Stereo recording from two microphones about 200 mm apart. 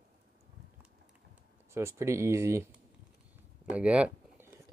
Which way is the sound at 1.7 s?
15° right (ahead or behind).